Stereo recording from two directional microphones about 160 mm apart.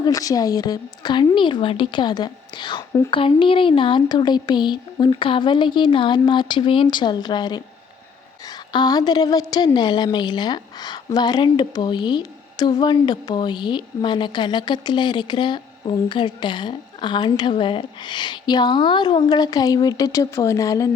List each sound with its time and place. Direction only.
0.0 s a woman's voice: 20° left (ahead or behind)
3.1 s a woman's voice: 35° left (ahead or behind)